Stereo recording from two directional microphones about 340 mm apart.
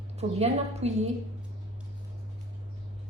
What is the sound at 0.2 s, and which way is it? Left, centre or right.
Speech, centre.